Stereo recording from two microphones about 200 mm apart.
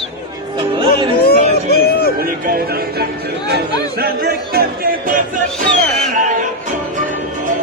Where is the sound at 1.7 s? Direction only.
50° left (ahead or behind).